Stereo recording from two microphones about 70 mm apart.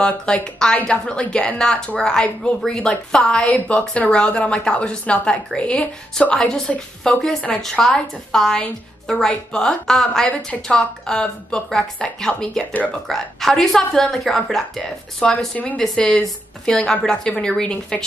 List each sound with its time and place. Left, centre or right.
0.0 s a woman's voice: centre
15.1 s a woman's voice: centre